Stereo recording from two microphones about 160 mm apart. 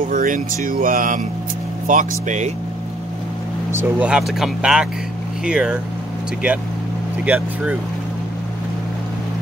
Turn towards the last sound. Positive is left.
turn(degrees=-10)  # may be behind; listen again after turning